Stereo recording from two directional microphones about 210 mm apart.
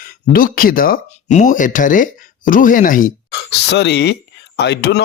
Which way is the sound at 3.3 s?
55° left (ahead or behind).